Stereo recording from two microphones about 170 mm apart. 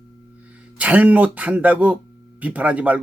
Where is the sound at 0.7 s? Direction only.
10° right (ahead or behind).